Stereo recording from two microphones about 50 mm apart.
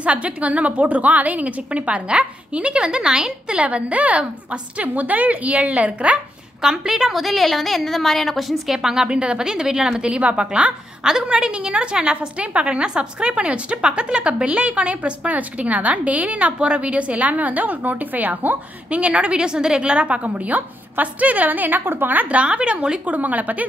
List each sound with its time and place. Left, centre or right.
0.0 s a woman's voice: right
3.5 s a woman's voice: right
6.6 s a woman's voice: centre
7.2 s a woman's voice: centre; by 23.6 s right